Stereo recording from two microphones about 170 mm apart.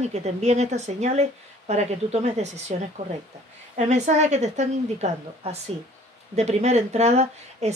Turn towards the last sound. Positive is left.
turn(degrees=-40)  # may be behind; listen again after turning